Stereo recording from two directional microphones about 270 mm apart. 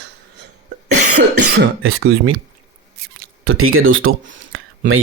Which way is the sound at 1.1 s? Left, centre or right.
Right.